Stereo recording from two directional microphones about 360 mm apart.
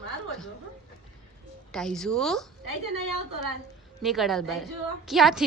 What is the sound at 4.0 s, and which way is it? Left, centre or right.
A woman's voice, centre.